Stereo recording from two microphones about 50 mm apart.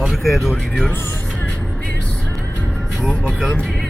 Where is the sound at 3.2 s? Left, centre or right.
Centre.